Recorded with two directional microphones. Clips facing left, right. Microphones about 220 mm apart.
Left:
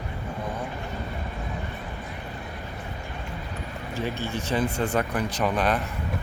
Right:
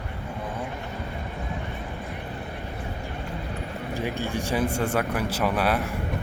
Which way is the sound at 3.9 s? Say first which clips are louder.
Right 1 dB; 15° right (ahead or behind).